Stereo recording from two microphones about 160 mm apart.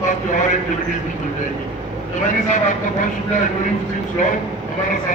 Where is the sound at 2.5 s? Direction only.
50° left (ahead or behind).